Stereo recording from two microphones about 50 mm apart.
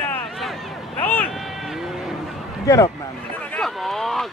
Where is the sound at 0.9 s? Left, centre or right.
Left.